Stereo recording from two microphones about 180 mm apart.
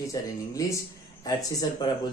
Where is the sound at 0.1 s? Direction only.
20° left (ahead or behind).